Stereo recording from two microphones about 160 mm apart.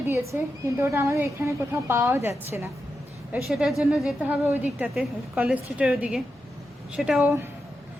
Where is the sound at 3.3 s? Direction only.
5° right (ahead or behind).